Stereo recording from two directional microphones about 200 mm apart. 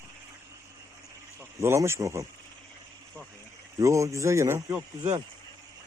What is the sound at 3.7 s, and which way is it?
Speech, 15° right (ahead or behind).